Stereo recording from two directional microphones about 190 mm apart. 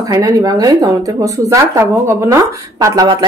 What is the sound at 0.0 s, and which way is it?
Speech, 20° right (ahead or behind).